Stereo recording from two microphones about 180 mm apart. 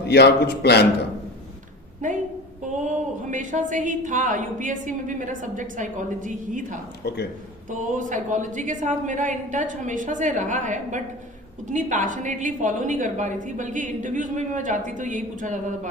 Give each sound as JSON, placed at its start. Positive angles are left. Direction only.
{"t": 0.0, "sound": "a man's voice", "side_deg": 65}
{"t": 2.0, "sound": "a sound", "side_deg": -45}
{"t": 2.8, "sound": "a woman's voice", "side_deg": -45}
{"t": 7.0, "sound": "a man's voice", "side_deg": 65}
{"t": 7.7, "sound": "a woman's voice", "side_deg": -45}